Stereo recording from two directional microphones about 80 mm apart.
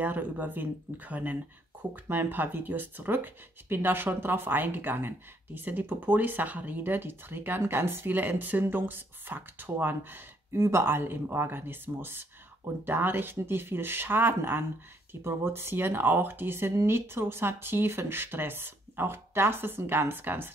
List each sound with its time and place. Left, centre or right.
0.0 s speech: right